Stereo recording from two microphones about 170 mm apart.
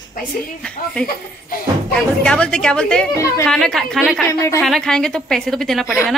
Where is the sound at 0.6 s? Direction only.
5° left (ahead or behind).